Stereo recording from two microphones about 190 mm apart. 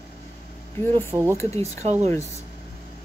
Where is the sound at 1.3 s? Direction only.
15° left (ahead or behind).